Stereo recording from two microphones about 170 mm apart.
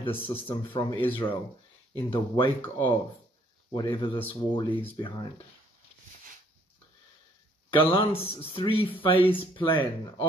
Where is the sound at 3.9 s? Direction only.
30° left (ahead or behind).